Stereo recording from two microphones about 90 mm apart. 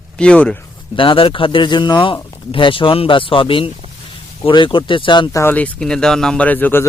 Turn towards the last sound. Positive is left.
turn(degrees=20)  # may be behind; listen again after turning